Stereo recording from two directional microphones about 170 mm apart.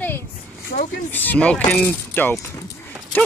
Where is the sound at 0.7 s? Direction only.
60° left (ahead or behind).